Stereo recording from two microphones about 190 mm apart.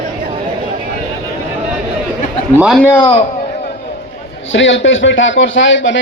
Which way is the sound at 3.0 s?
30° left (ahead or behind).